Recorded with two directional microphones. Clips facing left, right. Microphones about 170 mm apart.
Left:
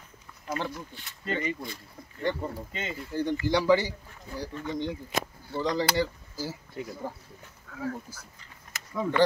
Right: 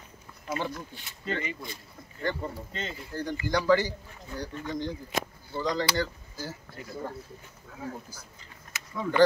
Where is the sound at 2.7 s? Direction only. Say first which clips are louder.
Left 3 dB; 5° left (ahead or behind).